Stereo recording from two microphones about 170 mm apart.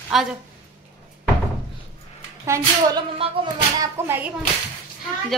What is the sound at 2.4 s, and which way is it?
Speech, 15° right (ahead or behind).